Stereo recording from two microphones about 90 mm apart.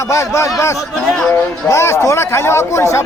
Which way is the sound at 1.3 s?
30° left (ahead or behind).